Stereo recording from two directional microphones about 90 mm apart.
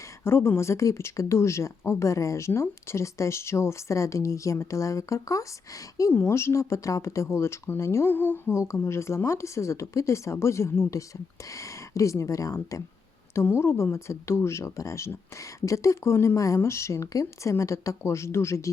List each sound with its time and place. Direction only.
0.3 s speech: 30° left (ahead or behind)
13.3 s speech: 25° left (ahead or behind)